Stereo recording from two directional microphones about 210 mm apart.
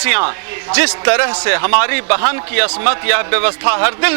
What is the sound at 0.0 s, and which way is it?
A man's voice, 15° right (ahead or behind).